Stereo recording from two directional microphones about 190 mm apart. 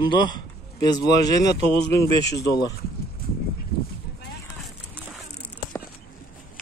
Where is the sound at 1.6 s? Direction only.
30° right (ahead or behind).